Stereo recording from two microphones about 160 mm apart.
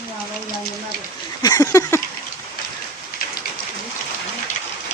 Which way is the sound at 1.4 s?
25° left (ahead or behind).